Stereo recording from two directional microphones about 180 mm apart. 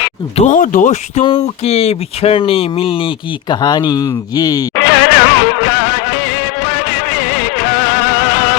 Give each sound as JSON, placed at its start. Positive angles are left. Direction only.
{"t": 0.3, "sound": "speech", "side_deg": 45}
{"t": 1.2, "sound": "speech", "side_deg": 30}
{"t": 4.7, "sound": "music", "side_deg": 90}